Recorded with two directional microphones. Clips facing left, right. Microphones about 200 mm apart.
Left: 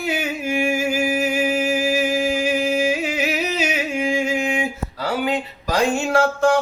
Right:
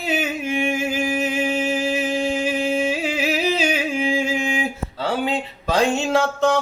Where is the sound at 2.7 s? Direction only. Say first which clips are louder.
Left 1 dB; 30° right (ahead or behind).